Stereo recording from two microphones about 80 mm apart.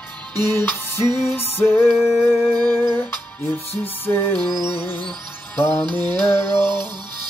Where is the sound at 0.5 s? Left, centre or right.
Left.